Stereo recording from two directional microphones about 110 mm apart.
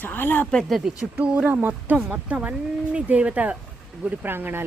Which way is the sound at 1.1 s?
10° right (ahead or behind).